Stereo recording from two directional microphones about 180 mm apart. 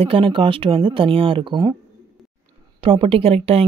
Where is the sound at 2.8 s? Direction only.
30° right (ahead or behind).